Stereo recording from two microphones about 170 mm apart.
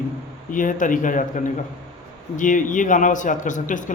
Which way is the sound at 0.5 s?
50° left (ahead or behind).